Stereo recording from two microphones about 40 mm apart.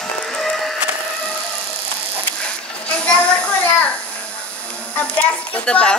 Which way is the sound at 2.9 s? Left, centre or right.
Left.